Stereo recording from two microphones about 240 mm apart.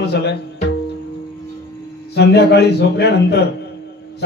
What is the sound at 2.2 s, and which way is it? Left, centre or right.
A man's voice, left.